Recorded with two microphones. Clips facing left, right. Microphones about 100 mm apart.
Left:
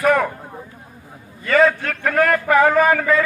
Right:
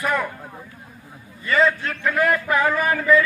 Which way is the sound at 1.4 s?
60° left (ahead or behind).